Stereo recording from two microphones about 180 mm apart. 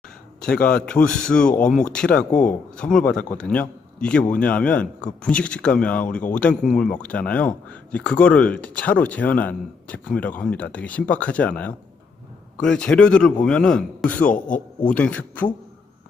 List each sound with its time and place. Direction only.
0.4 s a man's voice: 5° left (ahead or behind)
14.3 s a man's voice: 45° left (ahead or behind)
14.8 s speech: 5° left (ahead or behind)